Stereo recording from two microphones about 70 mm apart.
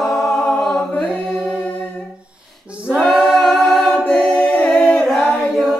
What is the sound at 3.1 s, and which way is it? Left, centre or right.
A capella, centre.